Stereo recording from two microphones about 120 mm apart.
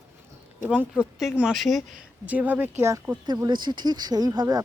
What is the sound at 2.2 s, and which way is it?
Speech, 15° right (ahead or behind).